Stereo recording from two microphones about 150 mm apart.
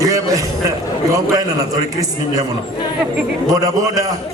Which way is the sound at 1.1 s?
20° right (ahead or behind).